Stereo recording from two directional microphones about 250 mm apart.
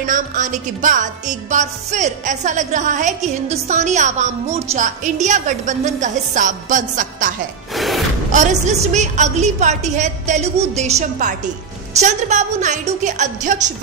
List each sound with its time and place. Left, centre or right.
0.0 s music: right
7.7 s music: centre
8.3 s music: right